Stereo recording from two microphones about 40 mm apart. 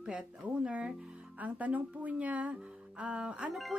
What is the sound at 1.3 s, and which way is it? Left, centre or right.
Speech, right.